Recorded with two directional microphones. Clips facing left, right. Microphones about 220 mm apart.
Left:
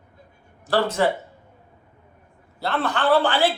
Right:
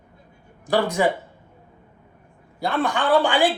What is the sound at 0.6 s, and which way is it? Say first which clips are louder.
Speech: even; 15° right (ahead or behind).